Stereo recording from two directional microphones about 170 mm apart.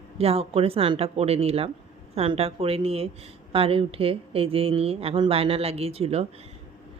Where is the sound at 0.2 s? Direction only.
35° right (ahead or behind).